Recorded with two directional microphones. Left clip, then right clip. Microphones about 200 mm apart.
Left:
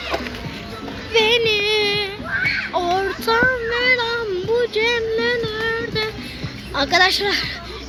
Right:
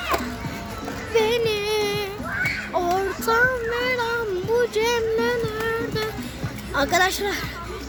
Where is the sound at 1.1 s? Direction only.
Centre (ahead or behind).